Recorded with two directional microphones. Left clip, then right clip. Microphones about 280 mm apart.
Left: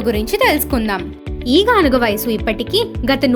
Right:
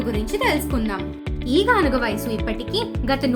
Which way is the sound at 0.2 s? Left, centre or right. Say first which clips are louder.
Left 5 dB; left.